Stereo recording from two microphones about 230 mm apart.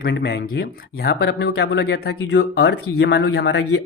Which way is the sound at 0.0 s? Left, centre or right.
Left.